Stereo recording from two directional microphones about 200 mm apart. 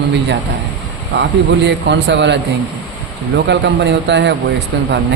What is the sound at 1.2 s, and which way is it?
A man's voice, 60° right (ahead or behind).